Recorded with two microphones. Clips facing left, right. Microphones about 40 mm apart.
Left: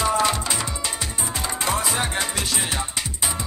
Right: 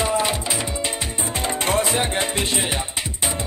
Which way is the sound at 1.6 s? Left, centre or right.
Right.